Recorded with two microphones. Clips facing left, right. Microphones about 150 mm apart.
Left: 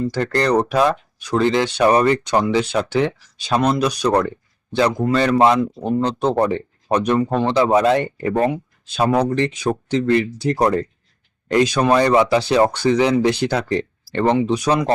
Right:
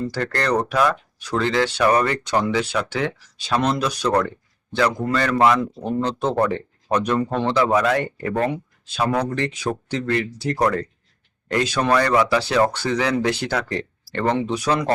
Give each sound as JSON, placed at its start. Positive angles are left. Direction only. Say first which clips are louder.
{"t": 0.1, "sound": "speech", "louder": "left 5 dB", "side_deg": 20}